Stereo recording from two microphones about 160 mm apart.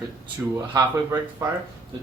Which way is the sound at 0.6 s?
20° right (ahead or behind).